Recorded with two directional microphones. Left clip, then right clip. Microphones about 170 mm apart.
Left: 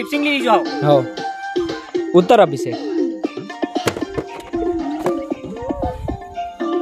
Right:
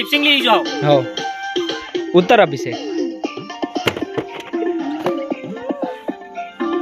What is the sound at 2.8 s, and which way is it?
Music, 75° left (ahead or behind).